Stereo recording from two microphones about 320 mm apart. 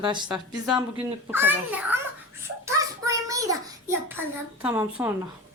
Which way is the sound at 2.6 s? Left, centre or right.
Centre.